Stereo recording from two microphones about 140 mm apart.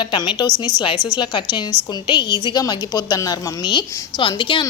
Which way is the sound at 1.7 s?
15° right (ahead or behind).